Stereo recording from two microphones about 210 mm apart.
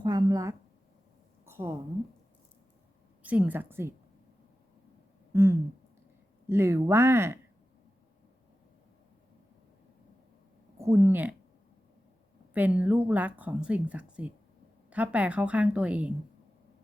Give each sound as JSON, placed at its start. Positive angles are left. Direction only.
{"t": 0.0, "sound": "speech", "side_deg": -20}
{"t": 1.5, "sound": "a sound", "side_deg": -10}
{"t": 3.2, "sound": "speech", "side_deg": -5}
{"t": 5.3, "sound": "a sound", "side_deg": -10}
{"t": 6.5, "sound": "speech", "side_deg": -10}
{"t": 10.8, "sound": "speech", "side_deg": -15}
{"t": 12.5, "sound": "speech", "side_deg": -10}